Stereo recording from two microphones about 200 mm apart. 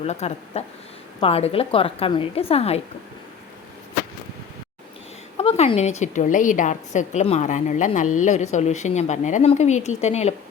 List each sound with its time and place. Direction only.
0.0 s a woman's voice: 30° left (ahead or behind)
5.4 s a woman's voice: 30° left (ahead or behind)